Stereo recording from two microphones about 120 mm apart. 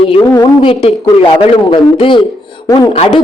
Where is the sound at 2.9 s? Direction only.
60° left (ahead or behind).